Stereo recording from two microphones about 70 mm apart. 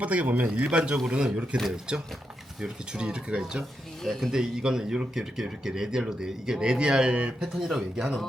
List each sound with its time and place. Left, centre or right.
0.0 s speech: right